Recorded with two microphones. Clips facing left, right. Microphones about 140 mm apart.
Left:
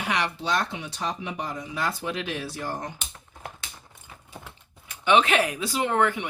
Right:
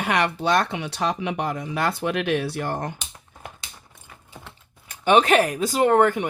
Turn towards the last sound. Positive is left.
turn(degrees=-45)  # may be behind; listen again after turning